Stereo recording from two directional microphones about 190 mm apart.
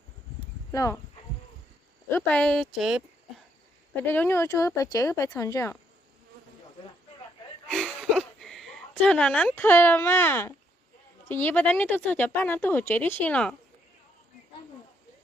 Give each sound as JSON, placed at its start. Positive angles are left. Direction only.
{"t": 0.7, "sound": "speech", "side_deg": 15}
{"t": 2.0, "sound": "speech", "side_deg": 10}
{"t": 3.9, "sound": "speech", "side_deg": 10}
{"t": 7.7, "sound": "a sound", "side_deg": 0}
{"t": 11.3, "sound": "speech", "side_deg": 10}